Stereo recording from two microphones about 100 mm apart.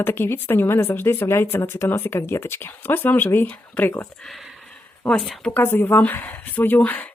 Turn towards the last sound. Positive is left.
turn(degrees=15)  # may be behind; listen again after turning